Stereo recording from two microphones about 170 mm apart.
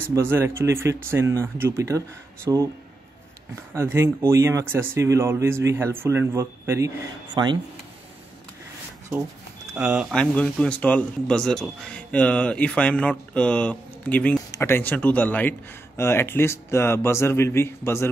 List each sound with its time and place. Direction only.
0.1 s speech: 15° right (ahead or behind)
3.7 s speech: 15° right (ahead or behind)
9.8 s speech: 10° right (ahead or behind)
10.1 s speech: 5° left (ahead or behind)